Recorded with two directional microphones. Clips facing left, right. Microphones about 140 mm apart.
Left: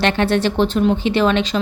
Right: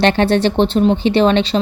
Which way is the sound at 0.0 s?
30° right (ahead or behind).